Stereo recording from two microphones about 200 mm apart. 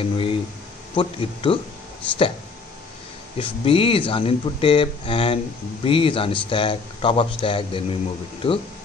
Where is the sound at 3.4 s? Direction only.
25° left (ahead or behind).